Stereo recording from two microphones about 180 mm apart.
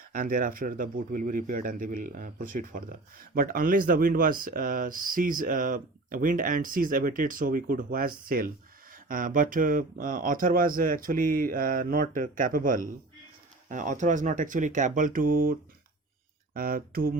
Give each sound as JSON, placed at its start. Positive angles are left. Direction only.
{"t": 0.1, "sound": "speech", "side_deg": -50}
{"t": 16.6, "sound": "mantra", "side_deg": -55}